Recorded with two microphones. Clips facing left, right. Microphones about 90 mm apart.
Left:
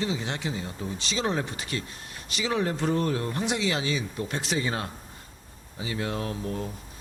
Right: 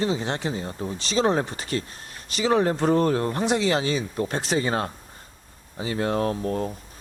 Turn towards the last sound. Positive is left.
turn(degrees=-45)  # may be behind; listen again after turning